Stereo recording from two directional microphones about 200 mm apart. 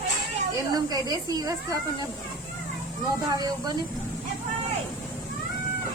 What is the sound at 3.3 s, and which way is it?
Speech, 20° right (ahead or behind).